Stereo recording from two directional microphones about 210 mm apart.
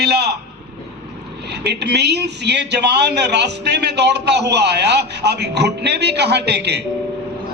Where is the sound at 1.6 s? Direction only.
55° right (ahead or behind).